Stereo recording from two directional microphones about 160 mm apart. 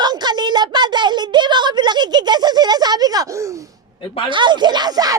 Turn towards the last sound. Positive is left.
turn(degrees=-25)  # may be behind; listen again after turning